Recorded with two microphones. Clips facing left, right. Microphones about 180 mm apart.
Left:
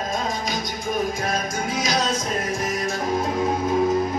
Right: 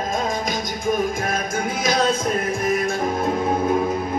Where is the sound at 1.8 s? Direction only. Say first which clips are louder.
Right 4 dB; 55° right (ahead or behind).